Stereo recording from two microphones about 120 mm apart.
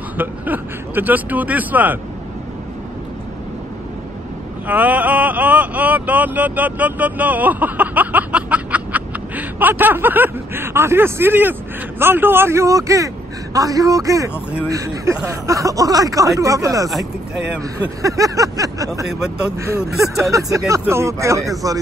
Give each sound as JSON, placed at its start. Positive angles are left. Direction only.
{"t": 0.2, "sound": "speech", "side_deg": -15}
{"t": 4.6, "sound": "a man's voice", "side_deg": -10}
{"t": 18.0, "sound": "a man's voice", "side_deg": -25}
{"t": 19.0, "sound": "speech", "side_deg": -5}
{"t": 19.5, "sound": "a man's voice", "side_deg": -20}